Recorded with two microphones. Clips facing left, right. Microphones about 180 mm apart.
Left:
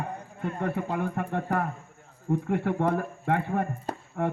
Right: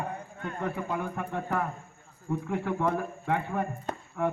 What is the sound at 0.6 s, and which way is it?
Speech, 60° left (ahead or behind).